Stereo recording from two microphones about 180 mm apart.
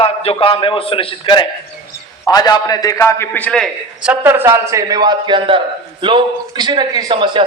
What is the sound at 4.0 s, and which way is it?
A man's voice, 10° right (ahead or behind).